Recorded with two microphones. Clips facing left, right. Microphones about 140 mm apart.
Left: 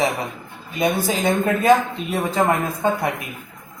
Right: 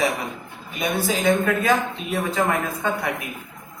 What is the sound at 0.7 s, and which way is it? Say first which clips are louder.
A man's voice: left 3 dB; 25° left (ahead or behind).